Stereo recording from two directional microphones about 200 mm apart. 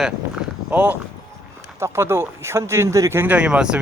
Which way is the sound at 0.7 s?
10° right (ahead or behind).